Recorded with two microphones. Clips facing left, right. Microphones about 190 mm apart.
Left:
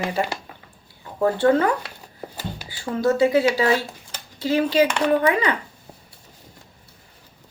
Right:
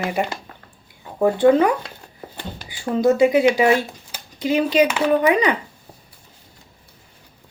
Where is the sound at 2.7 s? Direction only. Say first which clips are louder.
Right 4 dB; 15° right (ahead or behind).